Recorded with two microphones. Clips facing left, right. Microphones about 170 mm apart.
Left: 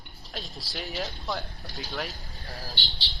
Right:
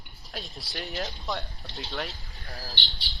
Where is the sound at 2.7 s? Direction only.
40° left (ahead or behind).